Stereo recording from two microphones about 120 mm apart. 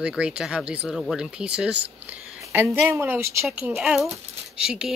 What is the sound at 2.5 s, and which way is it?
Speech, 20° right (ahead or behind).